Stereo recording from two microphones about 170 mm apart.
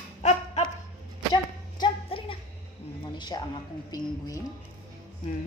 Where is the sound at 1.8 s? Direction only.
30° left (ahead or behind).